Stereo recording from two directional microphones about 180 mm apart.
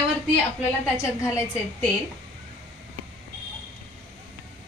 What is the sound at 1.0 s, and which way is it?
Speech, 15° left (ahead or behind).